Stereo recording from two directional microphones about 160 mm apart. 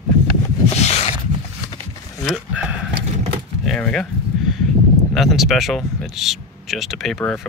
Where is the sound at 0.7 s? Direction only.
40° left (ahead or behind).